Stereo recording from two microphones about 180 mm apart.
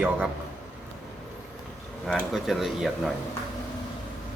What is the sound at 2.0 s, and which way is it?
Speech, centre (ahead or behind).